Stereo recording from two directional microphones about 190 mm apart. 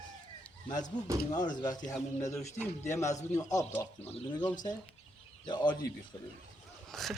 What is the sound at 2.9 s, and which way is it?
Speech, 15° left (ahead or behind).